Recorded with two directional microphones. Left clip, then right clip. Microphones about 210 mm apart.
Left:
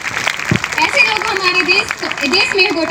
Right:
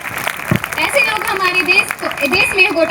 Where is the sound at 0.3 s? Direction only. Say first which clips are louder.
Left 1 dB; 50° right (ahead or behind).